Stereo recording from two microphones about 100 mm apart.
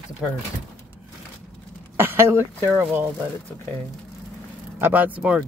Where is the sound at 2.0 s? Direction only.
25° right (ahead or behind).